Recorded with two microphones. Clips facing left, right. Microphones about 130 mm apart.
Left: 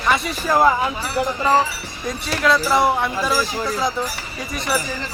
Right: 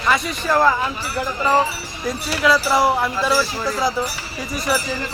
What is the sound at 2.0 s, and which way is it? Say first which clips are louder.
Speech: right 1 dB; 5° right (ahead or behind).